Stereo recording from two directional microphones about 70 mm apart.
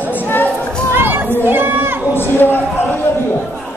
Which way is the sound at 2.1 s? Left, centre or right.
Left.